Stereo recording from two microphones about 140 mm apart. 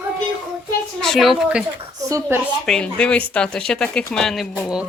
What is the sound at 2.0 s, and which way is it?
Speech, 20° right (ahead or behind).